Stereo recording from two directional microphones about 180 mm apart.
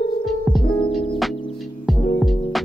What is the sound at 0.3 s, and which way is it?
Music, centre (ahead or behind).